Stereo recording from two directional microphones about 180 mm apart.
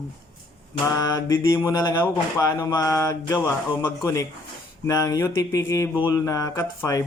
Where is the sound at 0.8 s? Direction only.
15° left (ahead or behind).